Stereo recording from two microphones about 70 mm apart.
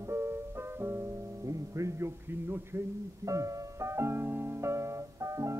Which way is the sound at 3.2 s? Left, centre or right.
Right.